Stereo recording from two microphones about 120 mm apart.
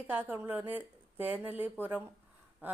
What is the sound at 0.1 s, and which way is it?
Speech, 15° right (ahead or behind).